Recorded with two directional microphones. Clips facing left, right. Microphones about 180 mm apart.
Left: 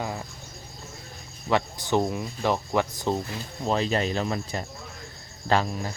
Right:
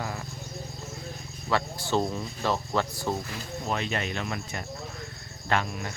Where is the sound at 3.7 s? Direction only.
35° left (ahead or behind).